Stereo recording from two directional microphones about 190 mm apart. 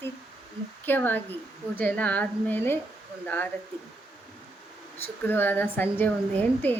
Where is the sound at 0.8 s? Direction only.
10° left (ahead or behind).